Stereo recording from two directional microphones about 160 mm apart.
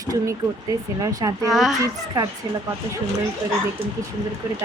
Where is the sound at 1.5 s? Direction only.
Centre (ahead or behind).